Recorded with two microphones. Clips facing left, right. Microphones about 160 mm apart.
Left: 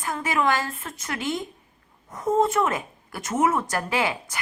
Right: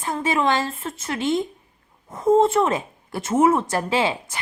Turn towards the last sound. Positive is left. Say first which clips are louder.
# right 3 dB
turn(degrees=-25)  # may be behind; listen again after turning